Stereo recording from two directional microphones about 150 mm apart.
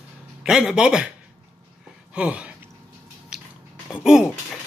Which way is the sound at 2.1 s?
10° right (ahead or behind).